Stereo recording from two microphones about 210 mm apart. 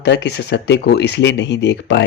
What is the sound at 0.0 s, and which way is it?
Speech, 55° left (ahead or behind).